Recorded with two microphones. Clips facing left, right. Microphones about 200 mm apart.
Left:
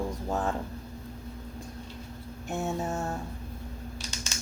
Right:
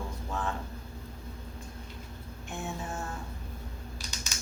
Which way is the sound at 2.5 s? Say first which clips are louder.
Left 7 dB; 40° left (ahead or behind).